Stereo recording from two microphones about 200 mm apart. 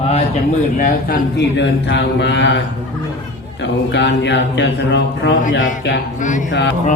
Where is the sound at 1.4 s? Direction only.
60° left (ahead or behind).